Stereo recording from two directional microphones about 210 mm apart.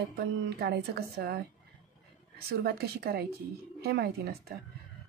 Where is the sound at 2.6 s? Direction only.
45° right (ahead or behind).